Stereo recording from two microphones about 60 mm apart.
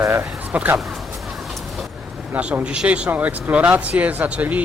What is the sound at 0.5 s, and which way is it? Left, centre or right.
Speech, right.